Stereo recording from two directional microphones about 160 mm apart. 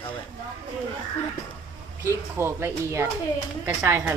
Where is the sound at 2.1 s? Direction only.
15° right (ahead or behind).